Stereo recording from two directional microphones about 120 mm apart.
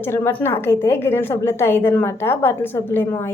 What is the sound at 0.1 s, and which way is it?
A woman's voice, 20° left (ahead or behind).